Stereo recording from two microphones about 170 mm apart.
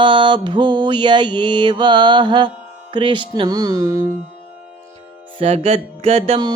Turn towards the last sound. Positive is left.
turn(degrees=-35)  # may be behind; listen again after turning